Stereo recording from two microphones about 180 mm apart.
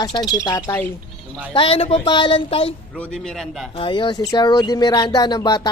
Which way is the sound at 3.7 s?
25° left (ahead or behind).